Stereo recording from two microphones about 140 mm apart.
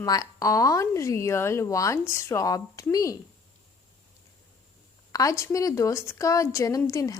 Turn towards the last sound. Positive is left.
turn(degrees=25)  # may be behind; listen again after turning